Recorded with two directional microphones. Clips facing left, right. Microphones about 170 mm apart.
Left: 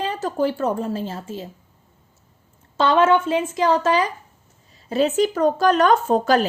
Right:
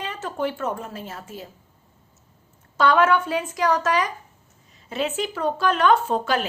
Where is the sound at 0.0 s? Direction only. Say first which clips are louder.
Left 5 dB; 35° left (ahead or behind).